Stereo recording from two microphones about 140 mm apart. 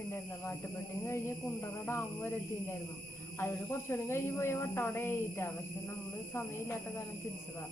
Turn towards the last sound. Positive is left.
turn(degrees=20)  # may be behind; listen again after turning